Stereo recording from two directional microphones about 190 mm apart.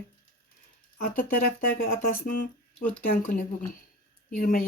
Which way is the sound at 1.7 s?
50° left (ahead or behind).